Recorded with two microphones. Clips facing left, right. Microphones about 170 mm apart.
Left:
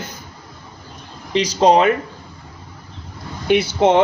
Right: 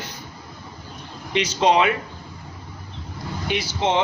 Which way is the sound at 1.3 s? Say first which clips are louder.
Left 5 dB; 35° left (ahead or behind).